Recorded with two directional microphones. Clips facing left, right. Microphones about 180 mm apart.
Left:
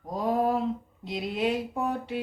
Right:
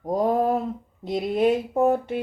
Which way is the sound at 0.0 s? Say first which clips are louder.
Right 5 dB; 45° right (ahead or behind).